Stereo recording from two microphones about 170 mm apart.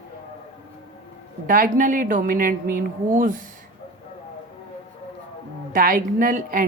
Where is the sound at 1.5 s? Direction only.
50° right (ahead or behind).